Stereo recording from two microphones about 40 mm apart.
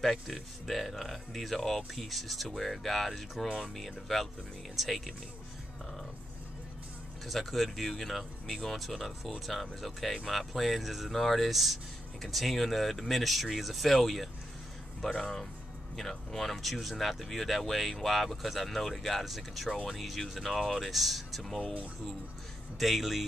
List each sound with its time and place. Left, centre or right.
0.7 s speech: centre
3.4 s speech: centre
3.7 s speech: centre
7.2 s speech: centre
15.1 s speech: centre
22.8 s speech: centre